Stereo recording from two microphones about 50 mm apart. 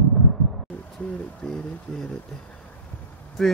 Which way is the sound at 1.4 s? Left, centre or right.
Centre.